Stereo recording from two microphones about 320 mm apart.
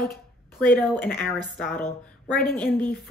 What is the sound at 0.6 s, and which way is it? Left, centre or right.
A woman's voice, centre.